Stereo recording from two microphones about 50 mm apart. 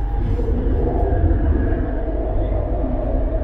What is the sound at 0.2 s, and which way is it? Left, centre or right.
Vehicle, centre.